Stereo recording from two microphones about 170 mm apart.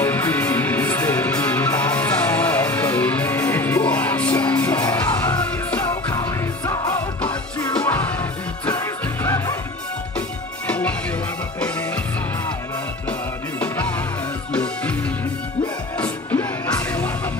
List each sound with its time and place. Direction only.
0.0 s music: 10° left (ahead or behind)
6.1 s music: 20° left (ahead or behind)
7.7 s music: 10° left (ahead or behind)
10.7 s music: 5° left (ahead or behind)
14.5 s music: 5° left (ahead or behind)
16.0 s music: 10° left (ahead or behind)